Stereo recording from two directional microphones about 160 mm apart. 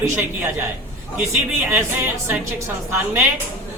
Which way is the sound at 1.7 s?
15° right (ahead or behind).